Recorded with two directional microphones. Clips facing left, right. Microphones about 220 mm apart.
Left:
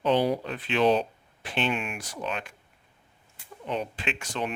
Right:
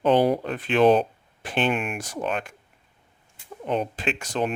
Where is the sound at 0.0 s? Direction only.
50° right (ahead or behind).